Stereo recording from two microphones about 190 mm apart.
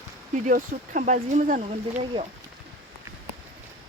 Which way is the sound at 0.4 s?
45° right (ahead or behind).